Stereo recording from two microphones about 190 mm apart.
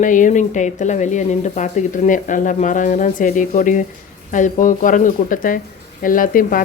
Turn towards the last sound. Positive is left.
turn(degrees=45)  # may be behind; listen again after turning